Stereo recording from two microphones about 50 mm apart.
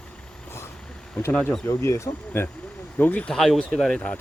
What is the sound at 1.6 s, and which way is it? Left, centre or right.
Speech, left.